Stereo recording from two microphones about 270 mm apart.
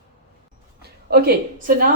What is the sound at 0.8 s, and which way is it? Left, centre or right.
A woman's voice, right.